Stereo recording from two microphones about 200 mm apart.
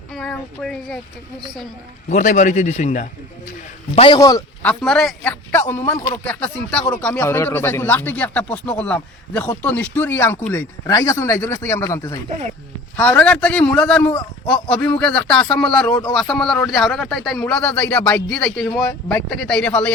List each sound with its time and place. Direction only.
0.1 s speech: centre (ahead or behind)
2.0 s a man's voice: 40° left (ahead or behind)
3.9 s a man's voice: 25° left (ahead or behind)
4.6 s a man's voice: 5° left (ahead or behind)